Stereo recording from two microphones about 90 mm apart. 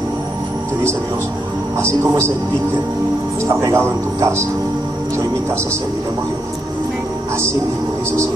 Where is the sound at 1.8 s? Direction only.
30° right (ahead or behind).